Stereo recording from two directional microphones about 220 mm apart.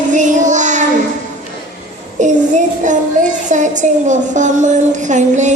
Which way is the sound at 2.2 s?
35° right (ahead or behind).